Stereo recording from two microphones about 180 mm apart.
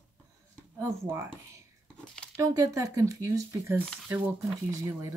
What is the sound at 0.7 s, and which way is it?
Speech, 15° right (ahead or behind).